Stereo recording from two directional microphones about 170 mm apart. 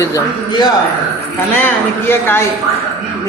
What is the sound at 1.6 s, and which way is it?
Speech, 10° left (ahead or behind).